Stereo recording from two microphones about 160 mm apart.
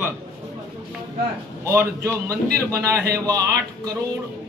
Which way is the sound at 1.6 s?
15° right (ahead or behind).